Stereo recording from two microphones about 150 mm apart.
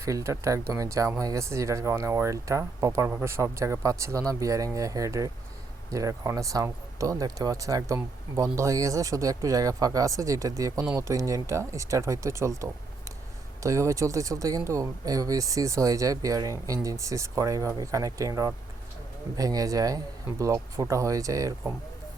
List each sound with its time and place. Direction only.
0.0 s speech: 20° right (ahead or behind)